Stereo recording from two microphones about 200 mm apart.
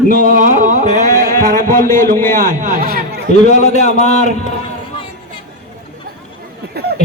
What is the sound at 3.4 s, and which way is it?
Speech, 35° left (ahead or behind).